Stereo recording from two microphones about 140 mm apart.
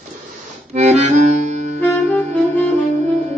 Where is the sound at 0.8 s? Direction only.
55° right (ahead or behind).